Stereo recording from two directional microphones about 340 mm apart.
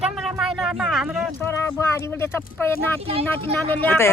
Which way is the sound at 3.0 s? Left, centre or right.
Centre.